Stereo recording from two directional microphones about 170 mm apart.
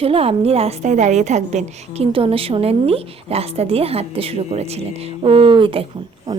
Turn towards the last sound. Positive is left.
turn(degrees=-20)  # may be behind; listen again after turning